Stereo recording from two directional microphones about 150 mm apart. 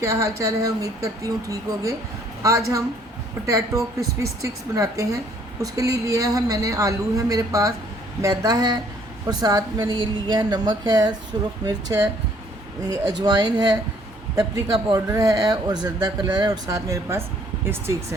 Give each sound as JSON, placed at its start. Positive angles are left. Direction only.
{"t": 0.0, "sound": "a woman's voice", "side_deg": -20}